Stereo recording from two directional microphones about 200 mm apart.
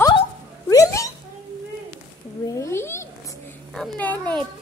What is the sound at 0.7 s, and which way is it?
Cat, 15° left (ahead or behind).